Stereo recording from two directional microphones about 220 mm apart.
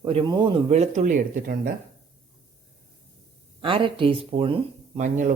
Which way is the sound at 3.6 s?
25° right (ahead or behind).